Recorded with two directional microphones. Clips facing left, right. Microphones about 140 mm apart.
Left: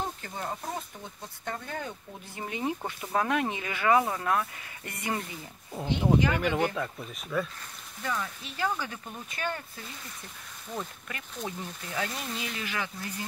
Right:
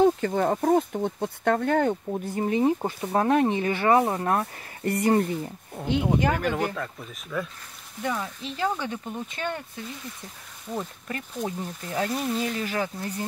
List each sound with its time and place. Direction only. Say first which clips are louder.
0.0 s speech: right 15 dB; 75° right (ahead or behind)
2.1 s speech: right 12 dB; 40° right (ahead or behind)
5.2 s speech: right 14 dB; 50° right (ahead or behind)
5.8 s speech: right 1 dB; centre (ahead or behind)
8.0 s speech: right 4 dB; 20° right (ahead or behind)
11.1 s speech: right 6 dB; 35° right (ahead or behind)